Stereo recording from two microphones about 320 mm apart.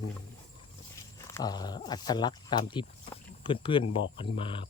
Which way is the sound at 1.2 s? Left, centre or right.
Centre.